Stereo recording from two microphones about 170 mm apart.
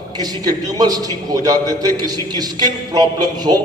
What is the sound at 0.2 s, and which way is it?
A man's voice, 25° right (ahead or behind).